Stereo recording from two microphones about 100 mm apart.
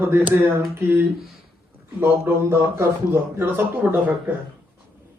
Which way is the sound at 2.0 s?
25° right (ahead or behind).